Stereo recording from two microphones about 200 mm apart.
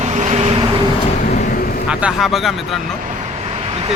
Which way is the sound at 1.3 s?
40° left (ahead or behind).